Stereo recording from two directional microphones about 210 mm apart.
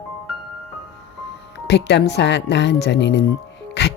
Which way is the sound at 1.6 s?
55° left (ahead or behind).